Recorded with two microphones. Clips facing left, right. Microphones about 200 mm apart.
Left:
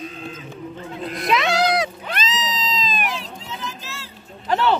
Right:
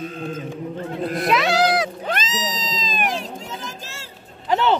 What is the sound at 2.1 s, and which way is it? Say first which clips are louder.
Cat: right 1 dB; 45° right (ahead or behind).